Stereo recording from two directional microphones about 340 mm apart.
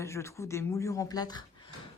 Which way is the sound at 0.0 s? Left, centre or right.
Centre.